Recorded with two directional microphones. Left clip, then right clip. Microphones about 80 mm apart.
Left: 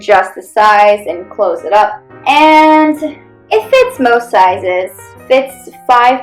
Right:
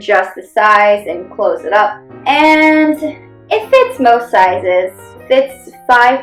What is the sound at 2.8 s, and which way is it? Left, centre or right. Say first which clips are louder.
A woman's voice: left 2 dB; left.